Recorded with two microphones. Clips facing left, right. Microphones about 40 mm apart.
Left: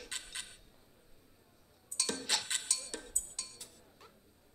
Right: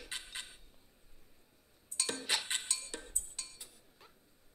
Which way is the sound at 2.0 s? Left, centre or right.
Centre.